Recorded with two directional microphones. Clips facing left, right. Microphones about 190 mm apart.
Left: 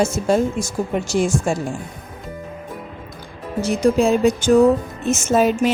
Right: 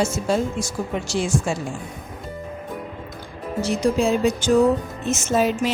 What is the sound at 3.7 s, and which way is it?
A woman's voice, 50° left (ahead or behind).